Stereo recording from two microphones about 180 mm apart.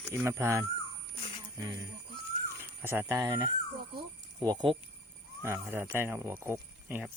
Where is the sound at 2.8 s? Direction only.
10° right (ahead or behind).